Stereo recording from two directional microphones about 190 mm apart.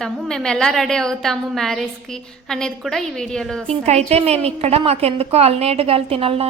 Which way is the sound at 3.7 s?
35° right (ahead or behind).